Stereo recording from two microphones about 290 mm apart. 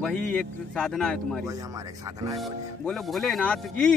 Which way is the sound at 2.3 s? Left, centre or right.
Centre.